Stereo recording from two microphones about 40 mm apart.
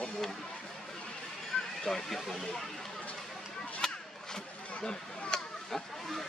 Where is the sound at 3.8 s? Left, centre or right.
Centre.